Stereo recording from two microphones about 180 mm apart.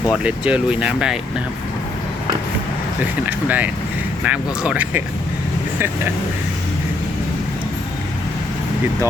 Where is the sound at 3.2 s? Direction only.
10° right (ahead or behind).